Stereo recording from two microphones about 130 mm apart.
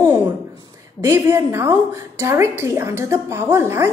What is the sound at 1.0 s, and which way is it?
A woman's voice, 20° right (ahead or behind).